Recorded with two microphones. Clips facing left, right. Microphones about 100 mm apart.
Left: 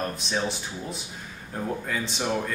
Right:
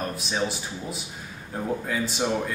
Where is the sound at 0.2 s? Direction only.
5° right (ahead or behind).